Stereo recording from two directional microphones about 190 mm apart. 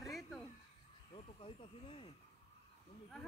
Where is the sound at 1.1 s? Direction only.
25° left (ahead or behind).